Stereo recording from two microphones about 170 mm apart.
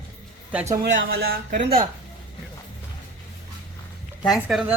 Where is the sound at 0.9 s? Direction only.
65° right (ahead or behind).